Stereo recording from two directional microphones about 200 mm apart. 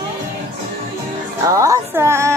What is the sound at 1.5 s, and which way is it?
Music, 15° right (ahead or behind).